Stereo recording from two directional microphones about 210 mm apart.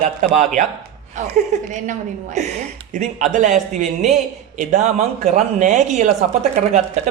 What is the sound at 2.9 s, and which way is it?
A woman's voice, 35° right (ahead or behind).